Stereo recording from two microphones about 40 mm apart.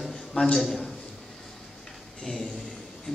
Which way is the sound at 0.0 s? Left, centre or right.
Centre.